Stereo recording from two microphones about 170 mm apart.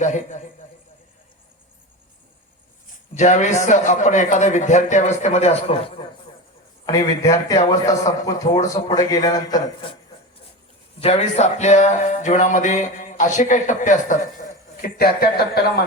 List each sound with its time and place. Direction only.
0.0 s speech: 45° left (ahead or behind)
3.2 s speech: 45° left (ahead or behind)
6.8 s a man's voice: 20° left (ahead or behind)
11.0 s speech: 40° left (ahead or behind); by 15.8 s 65° left (ahead or behind)